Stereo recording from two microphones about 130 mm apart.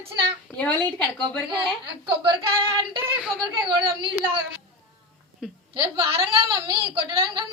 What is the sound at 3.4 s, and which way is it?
Speech, 40° right (ahead or behind).